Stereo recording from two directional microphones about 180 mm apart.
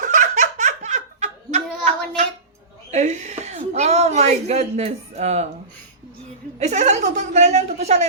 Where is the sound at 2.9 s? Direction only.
40° right (ahead or behind).